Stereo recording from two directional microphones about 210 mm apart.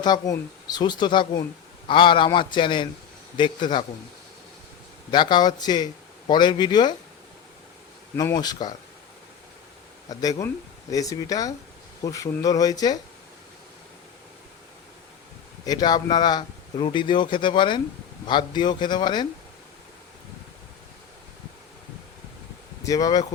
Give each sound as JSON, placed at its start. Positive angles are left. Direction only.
{"t": 0.0, "sound": "a man's voice", "side_deg": 20}
{"t": 5.1, "sound": "a man's voice", "side_deg": 20}
{"t": 8.1, "sound": "a man's voice", "side_deg": 15}
{"t": 10.1, "sound": "speech", "side_deg": 15}
{"t": 15.6, "sound": "a man's voice", "side_deg": 20}
{"t": 22.8, "sound": "speech", "side_deg": 15}